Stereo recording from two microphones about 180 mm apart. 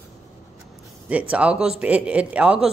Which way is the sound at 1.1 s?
5° right (ahead or behind).